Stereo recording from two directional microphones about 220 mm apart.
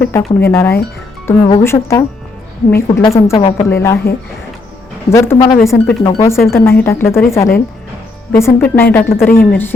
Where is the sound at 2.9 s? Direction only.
25° left (ahead or behind).